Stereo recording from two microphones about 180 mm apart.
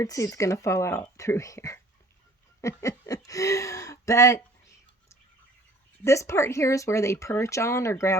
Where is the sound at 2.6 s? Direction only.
15° left (ahead or behind).